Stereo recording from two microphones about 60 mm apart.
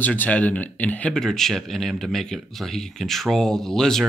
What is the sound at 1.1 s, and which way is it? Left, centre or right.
A man's voice, centre.